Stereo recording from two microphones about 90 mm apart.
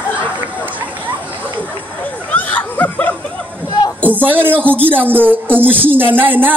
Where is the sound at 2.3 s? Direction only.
20° left (ahead or behind).